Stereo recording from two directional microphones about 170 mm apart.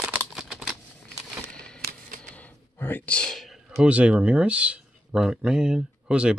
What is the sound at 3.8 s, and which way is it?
Speech, 5° right (ahead or behind).